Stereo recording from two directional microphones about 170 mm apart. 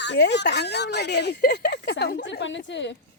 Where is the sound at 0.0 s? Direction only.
90° left.